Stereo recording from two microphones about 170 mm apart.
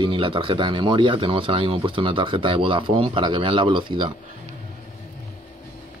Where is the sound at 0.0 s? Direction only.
30° right (ahead or behind).